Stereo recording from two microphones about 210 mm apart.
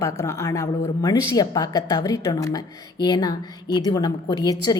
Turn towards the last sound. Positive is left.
turn(degrees=20)  # may be behind; listen again after turning